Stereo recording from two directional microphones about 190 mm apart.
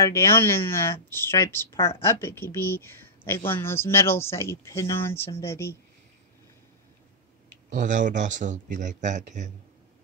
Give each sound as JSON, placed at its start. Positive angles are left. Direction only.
{"t": 0.0, "sound": "speech", "side_deg": 15}
{"t": 7.7, "sound": "speech", "side_deg": -40}